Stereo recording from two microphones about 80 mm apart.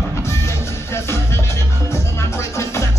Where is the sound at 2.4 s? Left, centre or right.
Left.